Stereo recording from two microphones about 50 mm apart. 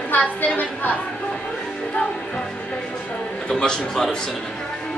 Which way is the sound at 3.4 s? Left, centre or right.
Centre.